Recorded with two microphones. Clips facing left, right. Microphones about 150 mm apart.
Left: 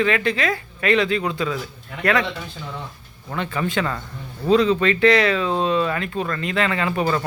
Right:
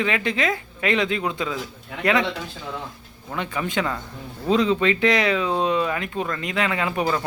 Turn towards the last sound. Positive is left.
turn(degrees=-15)  # may be behind; listen again after turning